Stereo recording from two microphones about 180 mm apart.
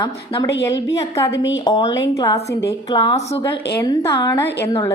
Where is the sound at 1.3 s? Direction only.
90° left.